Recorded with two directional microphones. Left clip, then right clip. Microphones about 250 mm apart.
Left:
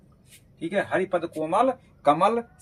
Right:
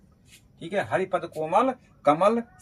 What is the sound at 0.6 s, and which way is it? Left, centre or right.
Speech, centre.